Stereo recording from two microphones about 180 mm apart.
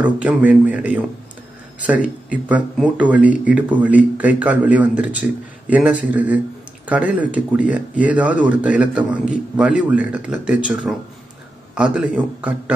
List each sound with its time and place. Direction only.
0.0 s speech: 10° right (ahead or behind)